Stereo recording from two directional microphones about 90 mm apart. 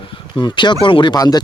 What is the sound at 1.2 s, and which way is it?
Speech, 45° left (ahead or behind).